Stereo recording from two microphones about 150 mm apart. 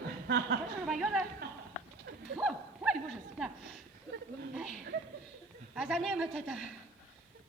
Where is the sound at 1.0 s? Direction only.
5° right (ahead or behind).